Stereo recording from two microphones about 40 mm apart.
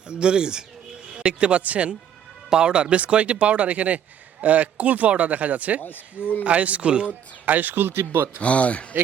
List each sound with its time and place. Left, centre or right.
0.1 s speech: right
7.4 s speech: right
8.4 s speech: left